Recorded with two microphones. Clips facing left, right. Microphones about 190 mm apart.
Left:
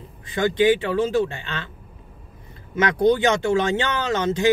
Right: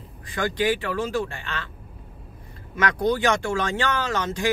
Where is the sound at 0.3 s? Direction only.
20° left (ahead or behind).